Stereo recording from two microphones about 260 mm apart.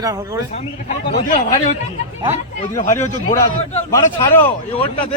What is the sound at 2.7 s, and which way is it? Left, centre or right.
Speech, left.